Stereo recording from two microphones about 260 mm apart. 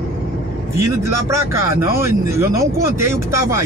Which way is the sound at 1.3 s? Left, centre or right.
Centre.